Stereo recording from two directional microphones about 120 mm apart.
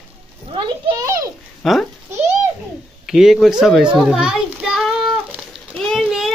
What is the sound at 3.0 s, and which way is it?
Children playing, 5° right (ahead or behind).